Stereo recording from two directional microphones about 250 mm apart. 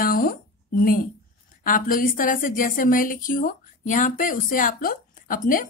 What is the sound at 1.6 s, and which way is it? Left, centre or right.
Speech, left.